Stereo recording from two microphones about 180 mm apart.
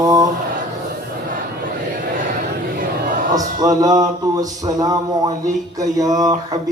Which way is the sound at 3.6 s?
20° right (ahead or behind).